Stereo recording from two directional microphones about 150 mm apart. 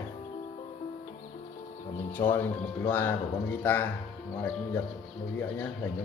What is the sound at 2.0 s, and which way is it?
Speech, 15° left (ahead or behind).